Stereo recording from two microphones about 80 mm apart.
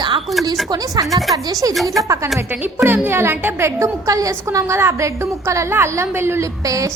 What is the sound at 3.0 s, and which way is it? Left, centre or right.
A woman's voice, right.